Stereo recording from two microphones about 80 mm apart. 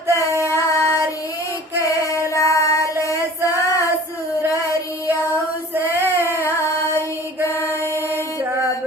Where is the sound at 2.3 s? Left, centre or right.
Left.